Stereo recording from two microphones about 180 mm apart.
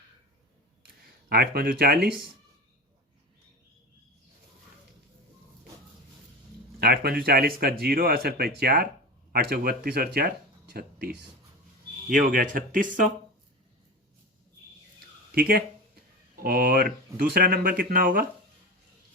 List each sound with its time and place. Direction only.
1.3 s speech: 55° right (ahead or behind)
2.0 s speech: 5° right (ahead or behind)
6.7 s speech: 60° right (ahead or behind)
12.0 s speech: 50° right (ahead or behind)
15.4 s speech: 55° right (ahead or behind)